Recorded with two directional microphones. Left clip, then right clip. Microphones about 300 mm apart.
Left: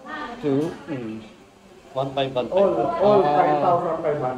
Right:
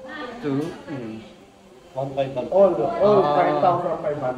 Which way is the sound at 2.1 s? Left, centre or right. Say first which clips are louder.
Right 2 dB; centre.